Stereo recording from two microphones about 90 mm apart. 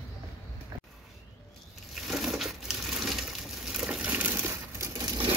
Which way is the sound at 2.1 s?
Centre (ahead or behind).